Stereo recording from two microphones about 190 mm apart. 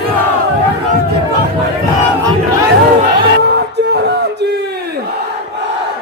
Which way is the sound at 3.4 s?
60° right (ahead or behind).